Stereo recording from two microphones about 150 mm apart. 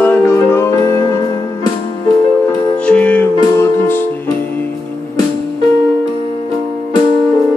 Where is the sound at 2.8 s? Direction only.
10° left (ahead or behind).